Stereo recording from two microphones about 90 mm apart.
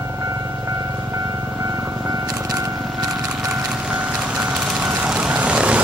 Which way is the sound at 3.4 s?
10° right (ahead or behind).